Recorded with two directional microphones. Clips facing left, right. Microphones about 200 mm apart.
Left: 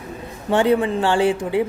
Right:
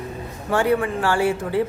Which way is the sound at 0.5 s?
20° left (ahead or behind).